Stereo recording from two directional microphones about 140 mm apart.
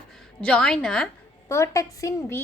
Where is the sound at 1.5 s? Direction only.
20° left (ahead or behind).